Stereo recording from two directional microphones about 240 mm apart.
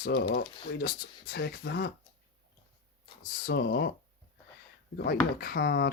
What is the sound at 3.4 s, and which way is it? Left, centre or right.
Speech, left.